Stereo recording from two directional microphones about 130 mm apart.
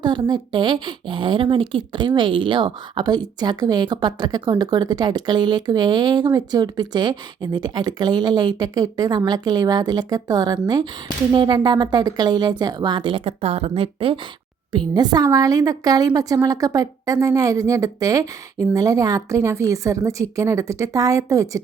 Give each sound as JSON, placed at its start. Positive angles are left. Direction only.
{"t": 0.0, "sound": "speech", "side_deg": -35}
{"t": 14.7, "sound": "a woman's voice", "side_deg": -35}